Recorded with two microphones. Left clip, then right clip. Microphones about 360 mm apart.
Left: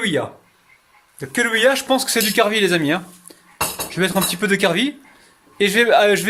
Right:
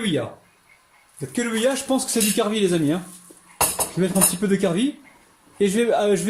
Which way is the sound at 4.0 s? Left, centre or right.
Left.